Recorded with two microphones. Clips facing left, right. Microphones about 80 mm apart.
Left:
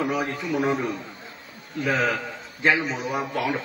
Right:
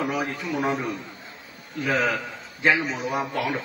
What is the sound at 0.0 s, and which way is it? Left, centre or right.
A man's voice, centre.